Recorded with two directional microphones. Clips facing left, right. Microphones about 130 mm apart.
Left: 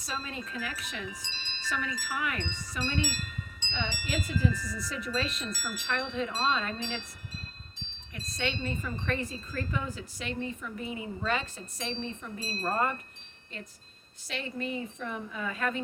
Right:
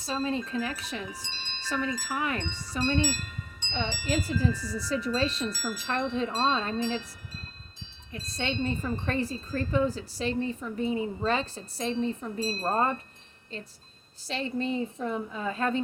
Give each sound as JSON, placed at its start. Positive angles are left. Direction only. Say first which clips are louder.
{"t": 0.0, "sound": "wind chime", "louder": "right 8 dB", "side_deg": -30}
{"t": 1.8, "sound": "wind chime", "louder": "right 5 dB", "side_deg": -35}
{"t": 8.1, "sound": "wind chime", "louder": "right 2 dB", "side_deg": -30}
{"t": 12.7, "sound": "speech", "louder": "right 2 dB", "side_deg": -25}
{"t": 14.3, "sound": "wind chime", "louder": "right 5 dB", "side_deg": -30}